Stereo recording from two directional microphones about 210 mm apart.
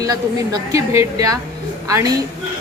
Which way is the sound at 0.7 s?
15° right (ahead or behind).